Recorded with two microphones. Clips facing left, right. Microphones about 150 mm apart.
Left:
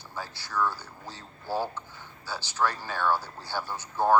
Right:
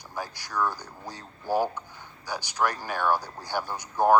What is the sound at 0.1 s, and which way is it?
Speech, 15° right (ahead or behind).